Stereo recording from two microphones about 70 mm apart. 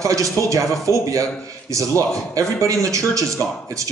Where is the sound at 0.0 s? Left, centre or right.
Right.